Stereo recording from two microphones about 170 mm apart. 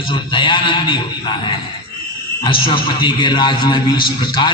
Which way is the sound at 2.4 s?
30° left (ahead or behind).